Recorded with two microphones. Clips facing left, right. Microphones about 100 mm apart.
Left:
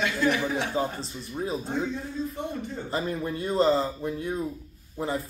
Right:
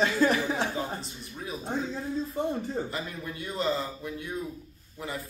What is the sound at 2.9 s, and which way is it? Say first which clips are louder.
Speech: left 7 dB; 35° left (ahead or behind).